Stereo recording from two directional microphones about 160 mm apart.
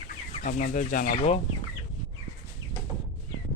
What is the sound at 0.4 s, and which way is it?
Speech, 60° left (ahead or behind).